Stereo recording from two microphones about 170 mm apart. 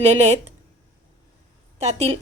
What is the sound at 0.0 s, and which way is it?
Speech, 40° right (ahead or behind).